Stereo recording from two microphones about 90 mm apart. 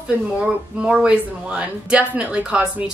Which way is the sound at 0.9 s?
10° right (ahead or behind).